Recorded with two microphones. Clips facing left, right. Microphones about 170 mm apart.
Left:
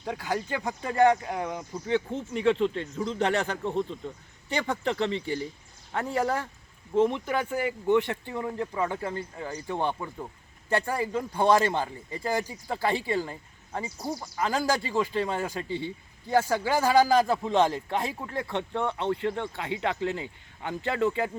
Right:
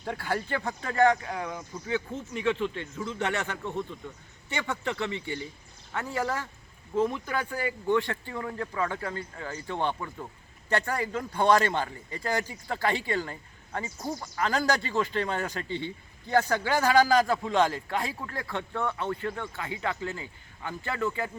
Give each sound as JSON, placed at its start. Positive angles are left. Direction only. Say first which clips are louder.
{"t": 0.0, "sound": "a man's voice", "louder": "left 1 dB", "side_deg": 10}
{"t": 20.7, "sound": "a man's voice", "louder": "left 4 dB", "side_deg": 35}